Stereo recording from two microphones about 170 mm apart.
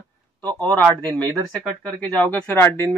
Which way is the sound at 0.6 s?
10° left (ahead or behind).